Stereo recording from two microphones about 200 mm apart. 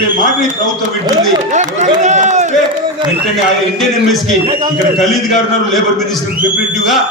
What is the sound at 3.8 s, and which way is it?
Speech, centre (ahead or behind).